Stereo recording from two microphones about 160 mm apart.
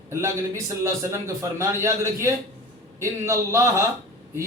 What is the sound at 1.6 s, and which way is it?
A man's voice, 15° right (ahead or behind).